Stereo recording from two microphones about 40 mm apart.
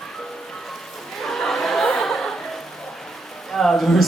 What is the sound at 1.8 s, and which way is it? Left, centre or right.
Chuckle, centre.